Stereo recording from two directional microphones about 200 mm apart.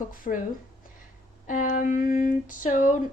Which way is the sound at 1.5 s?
40° left (ahead or behind).